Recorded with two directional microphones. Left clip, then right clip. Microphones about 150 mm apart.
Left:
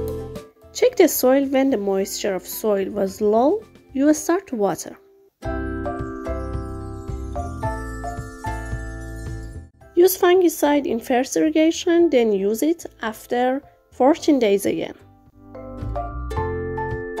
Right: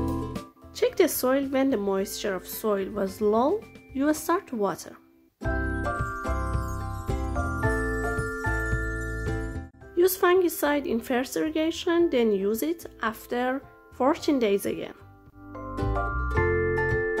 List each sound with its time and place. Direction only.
0.7 s a woman's voice: 30° left (ahead or behind)
5.4 s music: centre (ahead or behind)
9.9 s speech: 30° left (ahead or behind)
15.5 s music: centre (ahead or behind)